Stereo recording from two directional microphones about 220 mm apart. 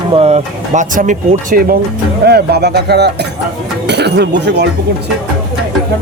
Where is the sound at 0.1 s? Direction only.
25° right (ahead or behind); by 4.6 s 50° right (ahead or behind).